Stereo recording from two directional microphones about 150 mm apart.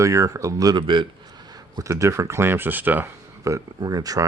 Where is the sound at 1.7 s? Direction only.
20° right (ahead or behind).